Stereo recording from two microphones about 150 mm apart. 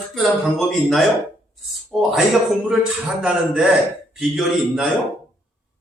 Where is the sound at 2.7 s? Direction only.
5° right (ahead or behind).